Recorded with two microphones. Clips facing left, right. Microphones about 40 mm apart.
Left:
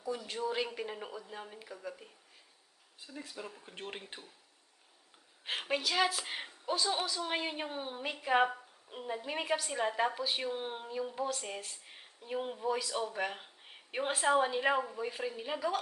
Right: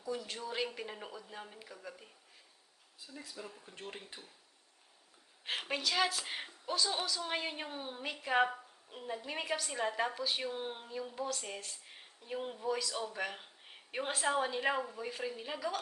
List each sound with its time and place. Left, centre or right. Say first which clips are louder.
0.0 s speech: left 4 dB; centre
3.0 s speech: left 3 dB; left
5.5 s a woman's voice: left 2 dB; centre